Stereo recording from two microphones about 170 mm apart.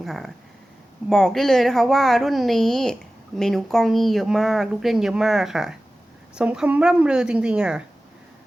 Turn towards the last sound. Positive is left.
turn(degrees=-5)  # may be behind; listen again after turning